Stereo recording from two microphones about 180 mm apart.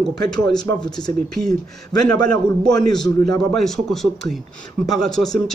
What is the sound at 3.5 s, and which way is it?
A man's voice, centre (ahead or behind).